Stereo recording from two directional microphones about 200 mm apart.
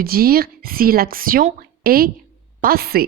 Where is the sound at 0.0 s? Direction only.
50° right (ahead or behind).